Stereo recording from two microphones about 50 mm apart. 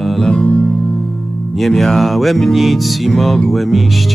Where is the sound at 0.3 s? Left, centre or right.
Left.